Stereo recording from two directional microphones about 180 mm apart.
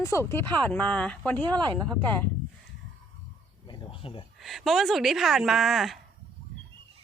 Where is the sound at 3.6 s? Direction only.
30° left (ahead or behind).